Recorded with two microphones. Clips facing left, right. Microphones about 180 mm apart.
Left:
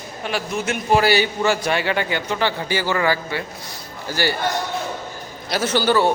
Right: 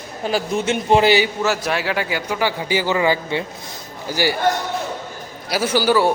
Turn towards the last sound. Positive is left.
turn(degrees=-10)  # may be behind; listen again after turning